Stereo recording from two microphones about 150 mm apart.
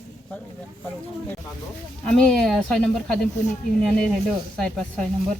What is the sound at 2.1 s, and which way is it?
Speech, 5° left (ahead or behind).